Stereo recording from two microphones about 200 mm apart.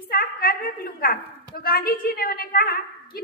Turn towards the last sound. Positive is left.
turn(degrees=50)  # may be behind; listen again after turning